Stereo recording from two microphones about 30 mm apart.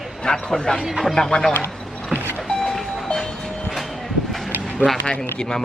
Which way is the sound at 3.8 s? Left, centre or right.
Centre.